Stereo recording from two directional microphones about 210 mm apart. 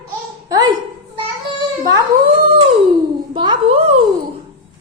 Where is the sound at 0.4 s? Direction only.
15° right (ahead or behind).